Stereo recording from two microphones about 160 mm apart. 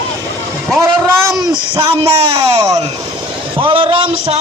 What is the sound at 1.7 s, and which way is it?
Speech, 30° right (ahead or behind).